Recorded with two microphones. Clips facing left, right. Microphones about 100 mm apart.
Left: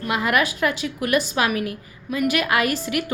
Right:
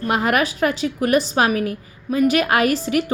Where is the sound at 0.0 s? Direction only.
40° right (ahead or behind).